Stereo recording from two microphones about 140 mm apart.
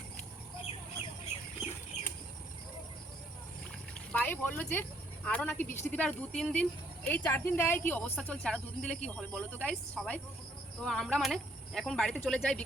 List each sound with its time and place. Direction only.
3.9 s a woman's voice: 10° left (ahead or behind)